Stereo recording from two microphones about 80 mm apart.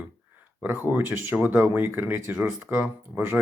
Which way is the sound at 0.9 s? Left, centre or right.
Right.